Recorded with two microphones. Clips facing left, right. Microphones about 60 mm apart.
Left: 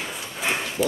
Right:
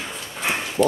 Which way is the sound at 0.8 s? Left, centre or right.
Right.